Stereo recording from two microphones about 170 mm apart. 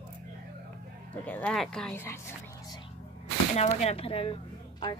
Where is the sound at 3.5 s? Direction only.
40° left (ahead or behind).